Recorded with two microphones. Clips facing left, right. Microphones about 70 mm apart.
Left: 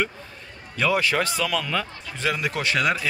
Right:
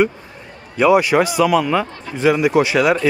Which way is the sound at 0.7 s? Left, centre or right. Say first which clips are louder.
Right 9 dB; centre.